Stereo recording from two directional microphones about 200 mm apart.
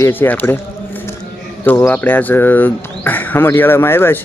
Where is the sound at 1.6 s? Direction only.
10° left (ahead or behind).